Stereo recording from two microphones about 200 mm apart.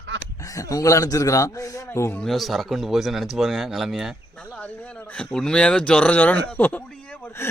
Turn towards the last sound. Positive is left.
turn(degrees=10)  # may be behind; listen again after turning